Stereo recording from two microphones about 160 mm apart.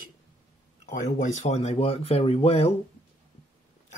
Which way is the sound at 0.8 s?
50° left (ahead or behind).